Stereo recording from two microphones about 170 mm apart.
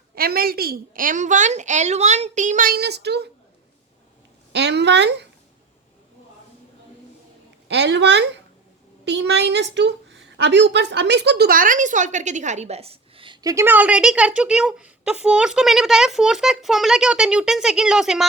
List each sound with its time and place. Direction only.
0.1 s a woman's voice: 65° right (ahead or behind)
4.5 s speech: 85° right
7.7 s a woman's voice: 85° right; by 18.3 s 5° right (ahead or behind)